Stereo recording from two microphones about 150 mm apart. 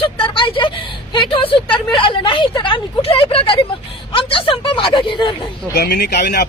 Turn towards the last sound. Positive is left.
turn(degrees=90)